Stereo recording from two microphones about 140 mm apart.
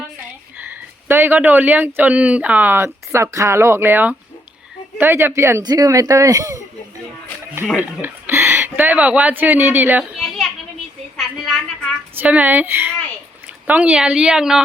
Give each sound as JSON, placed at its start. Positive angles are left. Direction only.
{"t": 0.5, "sound": "speech", "side_deg": -15}
{"t": 7.8, "sound": "speech", "side_deg": -15}
{"t": 10.0, "sound": "children playing", "side_deg": 0}
{"t": 11.2, "sound": "a sound", "side_deg": 0}
{"t": 12.1, "sound": "a woman's voice", "side_deg": -10}